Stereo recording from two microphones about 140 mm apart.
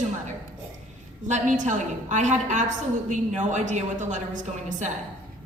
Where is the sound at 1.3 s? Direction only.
60° right (ahead or behind).